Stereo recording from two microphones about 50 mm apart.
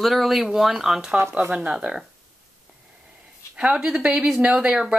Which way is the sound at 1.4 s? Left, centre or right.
Centre.